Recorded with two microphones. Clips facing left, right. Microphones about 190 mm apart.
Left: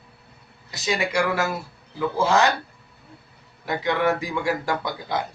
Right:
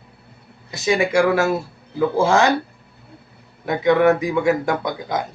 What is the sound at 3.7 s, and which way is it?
Speech, 20° right (ahead or behind).